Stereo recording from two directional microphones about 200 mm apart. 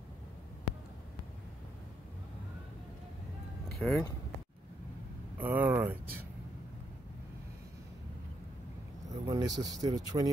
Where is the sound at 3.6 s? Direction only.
5° left (ahead or behind).